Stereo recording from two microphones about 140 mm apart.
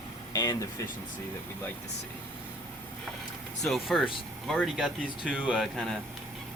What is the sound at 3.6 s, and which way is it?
Speech, centre (ahead or behind).